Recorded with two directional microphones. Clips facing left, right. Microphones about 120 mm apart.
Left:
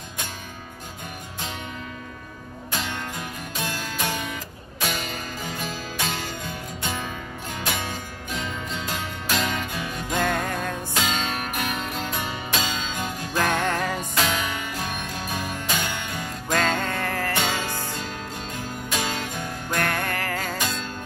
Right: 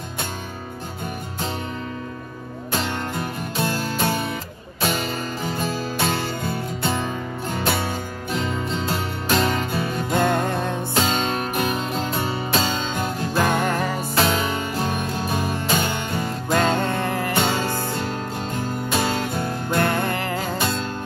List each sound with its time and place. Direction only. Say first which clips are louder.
2.7 s music: right 5 dB; 45° right (ahead or behind)
10.5 s music: right 4 dB; 25° right (ahead or behind)
11.0 s music: right 5 dB; 40° right (ahead or behind)
13.4 s music: right 2 dB; 15° right (ahead or behind)
14.1 s music: right 7 dB; 40° right (ahead or behind)
16.4 s music: right 3 dB; 15° right (ahead or behind)
17.4 s music: right 5 dB; 45° right (ahead or behind)
19.7 s music: right 4 dB; 15° right (ahead or behind)
20.5 s music: right 5 dB; 45° right (ahead or behind)